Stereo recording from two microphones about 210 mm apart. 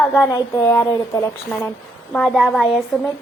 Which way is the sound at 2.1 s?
Centre (ahead or behind).